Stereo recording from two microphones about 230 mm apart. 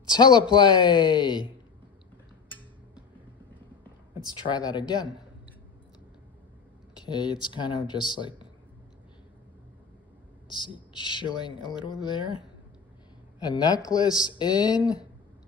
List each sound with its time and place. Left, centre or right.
0.0 s a woman's voice: centre
4.5 s speech: centre
7.0 s a woman's voice: centre
10.5 s a woman's voice: left